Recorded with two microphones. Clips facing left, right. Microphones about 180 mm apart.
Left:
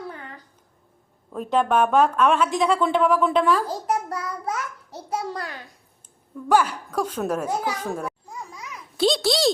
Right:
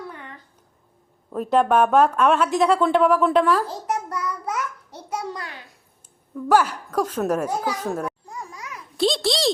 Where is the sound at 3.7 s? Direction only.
35° left (ahead or behind).